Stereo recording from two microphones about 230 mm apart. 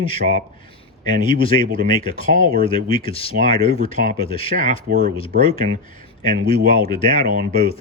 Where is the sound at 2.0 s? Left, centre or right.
Left.